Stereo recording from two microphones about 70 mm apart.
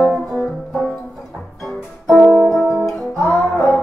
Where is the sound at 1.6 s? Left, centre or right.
Centre.